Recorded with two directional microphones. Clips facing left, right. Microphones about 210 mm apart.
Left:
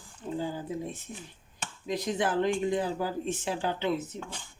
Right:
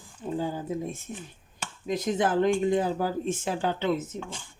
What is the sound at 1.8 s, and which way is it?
Speech, 50° right (ahead or behind).